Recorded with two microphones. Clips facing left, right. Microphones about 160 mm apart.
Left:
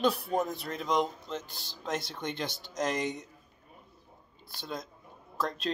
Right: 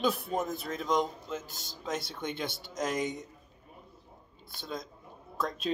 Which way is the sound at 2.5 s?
55° right (ahead or behind).